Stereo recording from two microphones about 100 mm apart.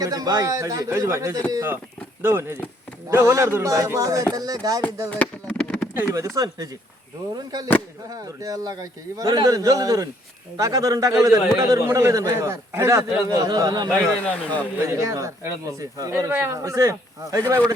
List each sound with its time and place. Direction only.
0.0 s a man's voice: 35° right (ahead or behind)
5.1 s a sound: 15° left (ahead or behind)
6.1 s a man's voice: 35° right (ahead or behind)
14.3 s speech: 15° left (ahead or behind)
14.8 s a man's voice: 30° right (ahead or behind)
16.3 s speech: 20° right (ahead or behind)
16.6 s a man's voice: 30° right (ahead or behind)